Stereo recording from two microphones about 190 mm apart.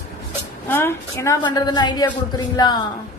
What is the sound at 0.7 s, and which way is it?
A woman's voice, 10° left (ahead or behind).